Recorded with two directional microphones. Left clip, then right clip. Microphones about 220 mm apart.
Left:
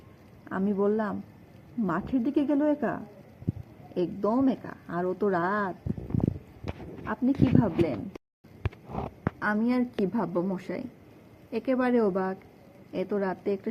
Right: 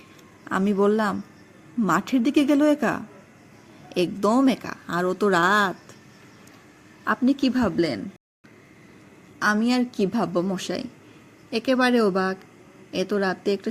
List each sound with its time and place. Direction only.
0.4 s speech: 35° right (ahead or behind)
7.0 s speech: 30° right (ahead or behind)
9.4 s a woman's voice: 25° right (ahead or behind)